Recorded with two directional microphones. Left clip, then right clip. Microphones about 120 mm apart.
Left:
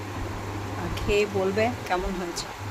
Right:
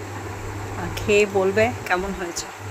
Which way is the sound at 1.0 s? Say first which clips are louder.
Right 6 dB; 25° right (ahead or behind).